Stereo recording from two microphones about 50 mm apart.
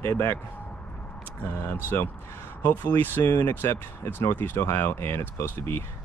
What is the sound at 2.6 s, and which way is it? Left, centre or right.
Speech, left.